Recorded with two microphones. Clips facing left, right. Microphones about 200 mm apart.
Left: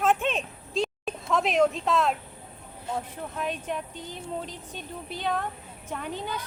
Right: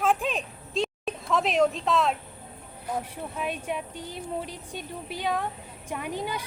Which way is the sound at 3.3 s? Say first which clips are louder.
Even; 10° right (ahead or behind).